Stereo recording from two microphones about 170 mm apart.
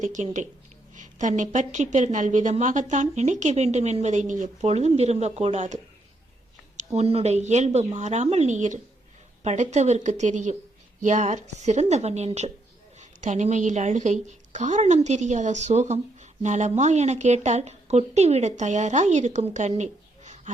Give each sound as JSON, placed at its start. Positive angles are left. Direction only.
{"t": 0.0, "sound": "a woman's voice", "side_deg": -45}